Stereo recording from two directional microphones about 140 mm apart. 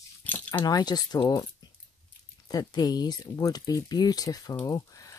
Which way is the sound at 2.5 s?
25° left (ahead or behind).